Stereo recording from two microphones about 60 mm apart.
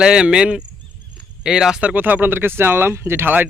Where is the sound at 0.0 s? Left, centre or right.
Centre.